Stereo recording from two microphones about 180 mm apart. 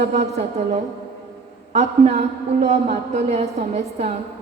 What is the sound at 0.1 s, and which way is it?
A woman's voice, 40° right (ahead or behind).